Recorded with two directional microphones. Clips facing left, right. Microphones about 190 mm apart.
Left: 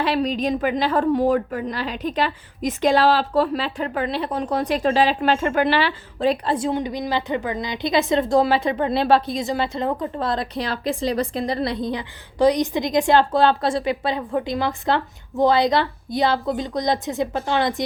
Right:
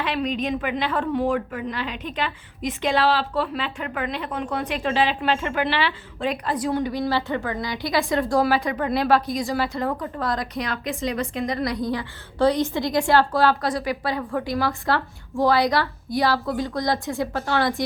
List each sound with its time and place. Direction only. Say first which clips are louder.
0.0 s a woman's voice: left 4 dB; 35° left (ahead or behind); by 17.8 s 20° left (ahead or behind)